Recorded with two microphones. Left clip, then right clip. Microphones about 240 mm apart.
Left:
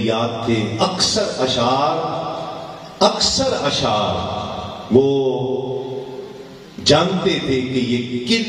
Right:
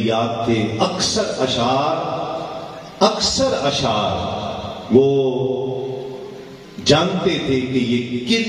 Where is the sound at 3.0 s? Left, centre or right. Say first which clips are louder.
Even; left.